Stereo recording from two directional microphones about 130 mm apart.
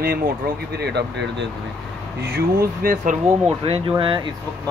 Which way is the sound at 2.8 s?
90° right.